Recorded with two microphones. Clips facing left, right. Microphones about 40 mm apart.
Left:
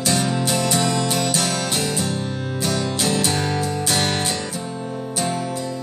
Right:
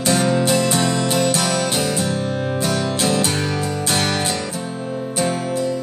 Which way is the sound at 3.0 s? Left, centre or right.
Right.